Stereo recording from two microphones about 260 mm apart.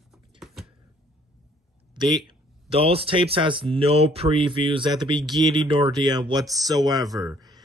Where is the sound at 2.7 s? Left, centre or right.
Right.